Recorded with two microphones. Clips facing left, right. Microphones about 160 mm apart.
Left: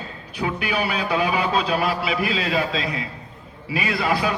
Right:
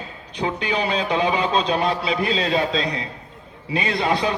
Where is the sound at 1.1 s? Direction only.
25° right (ahead or behind).